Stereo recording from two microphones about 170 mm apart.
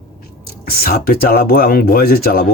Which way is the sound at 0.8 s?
60° left (ahead or behind).